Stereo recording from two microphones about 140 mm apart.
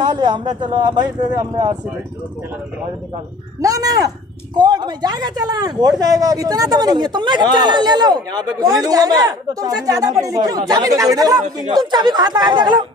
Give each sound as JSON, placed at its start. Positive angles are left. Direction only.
{"t": 0.0, "sound": "speech", "side_deg": -30}
{"t": 3.6, "sound": "speech", "side_deg": -25}